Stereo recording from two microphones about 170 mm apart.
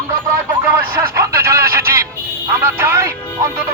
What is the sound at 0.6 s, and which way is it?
Music, 15° right (ahead or behind).